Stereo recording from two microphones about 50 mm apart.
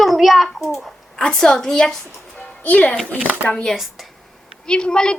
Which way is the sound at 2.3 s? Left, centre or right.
Left.